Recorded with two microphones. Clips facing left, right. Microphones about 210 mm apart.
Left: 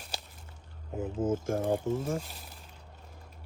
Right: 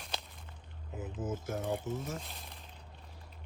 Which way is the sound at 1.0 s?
25° left (ahead or behind).